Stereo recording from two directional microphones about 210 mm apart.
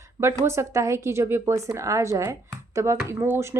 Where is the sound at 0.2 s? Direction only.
15° right (ahead or behind).